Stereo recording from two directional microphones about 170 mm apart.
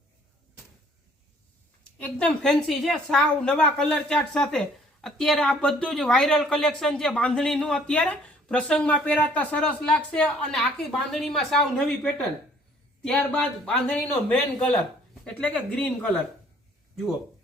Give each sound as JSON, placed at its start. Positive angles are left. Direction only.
{"t": 2.0, "sound": "a woman's voice", "side_deg": 5}